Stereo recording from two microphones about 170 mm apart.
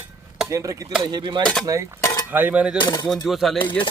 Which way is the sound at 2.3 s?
10° right (ahead or behind).